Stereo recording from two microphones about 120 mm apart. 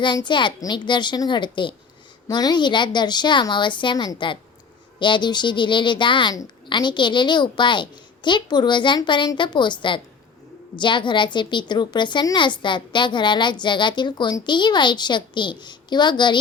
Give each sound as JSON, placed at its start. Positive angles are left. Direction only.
{"t": 0.0, "sound": "a woman's voice", "side_deg": 40}